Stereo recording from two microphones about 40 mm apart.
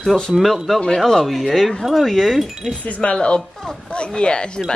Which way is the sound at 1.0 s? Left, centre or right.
Centre.